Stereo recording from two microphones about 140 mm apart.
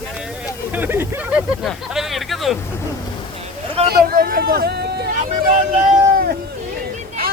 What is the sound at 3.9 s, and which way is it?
Speech, 90° right.